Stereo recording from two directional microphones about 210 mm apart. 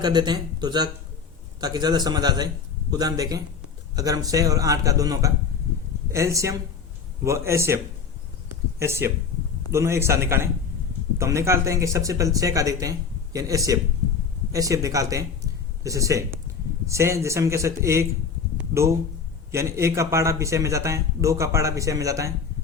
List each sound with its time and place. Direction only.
0.0 s a man's voice: 20° right (ahead or behind)
8.8 s a man's voice: 15° right (ahead or behind)
18.5 s a sound: 15° right (ahead or behind)
19.5 s a man's voice: 15° right (ahead or behind)